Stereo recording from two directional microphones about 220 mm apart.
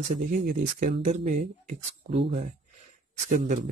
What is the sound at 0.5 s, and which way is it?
Speech, 35° right (ahead or behind).